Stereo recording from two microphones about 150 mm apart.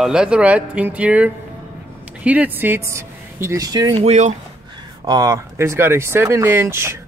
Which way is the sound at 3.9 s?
45° right (ahead or behind).